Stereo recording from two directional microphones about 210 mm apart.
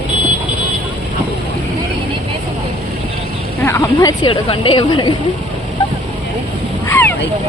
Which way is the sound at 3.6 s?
15° left (ahead or behind).